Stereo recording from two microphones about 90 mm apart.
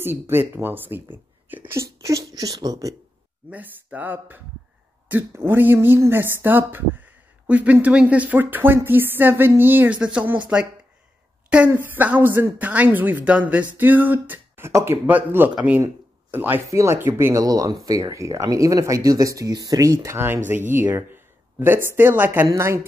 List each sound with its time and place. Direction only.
0.0 s speech: 25° right (ahead or behind)
1.7 s speech: 35° right (ahead or behind)
3.4 s speech: 15° right (ahead or behind)
9.9 s speech: 10° right (ahead or behind)
11.7 s speech: 20° right (ahead or behind)
15.0 s speech: 20° right (ahead or behind)
16.6 s speech: 35° right (ahead or behind)
17.4 s speech: 45° right (ahead or behind)
19.5 s speech: 50° right (ahead or behind)
19.8 s speech: 35° right (ahead or behind)
22.5 s speech: 30° right (ahead or behind)